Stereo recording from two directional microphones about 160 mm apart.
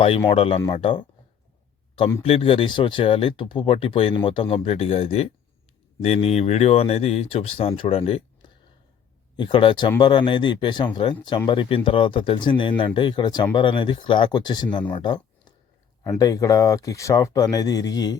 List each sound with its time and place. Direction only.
0.3 s speech: 35° left (ahead or behind)
2.2 s speech: 35° left (ahead or behind)